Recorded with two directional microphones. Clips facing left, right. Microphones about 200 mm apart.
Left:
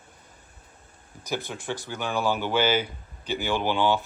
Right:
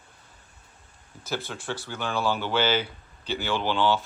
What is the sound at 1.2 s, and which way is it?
Speech, 15° left (ahead or behind).